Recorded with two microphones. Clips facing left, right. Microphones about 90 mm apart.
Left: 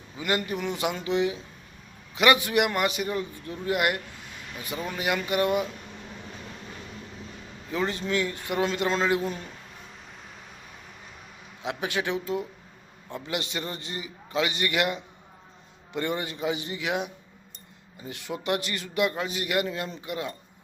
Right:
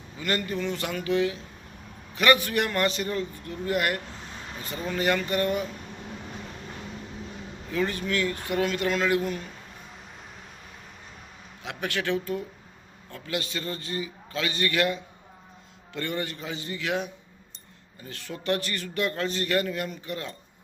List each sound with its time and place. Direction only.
0.2 s a man's voice: 15° left (ahead or behind)
7.7 s a man's voice: 20° left (ahead or behind)
11.6 s a man's voice: 20° left (ahead or behind)